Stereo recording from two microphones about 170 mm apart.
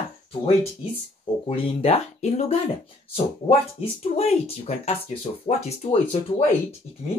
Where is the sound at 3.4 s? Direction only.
35° left (ahead or behind).